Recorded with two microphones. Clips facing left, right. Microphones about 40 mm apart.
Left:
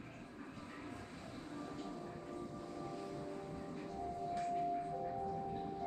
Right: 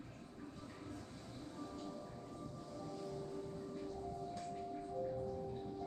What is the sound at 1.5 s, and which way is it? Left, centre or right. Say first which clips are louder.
Music: left 2 dB; left.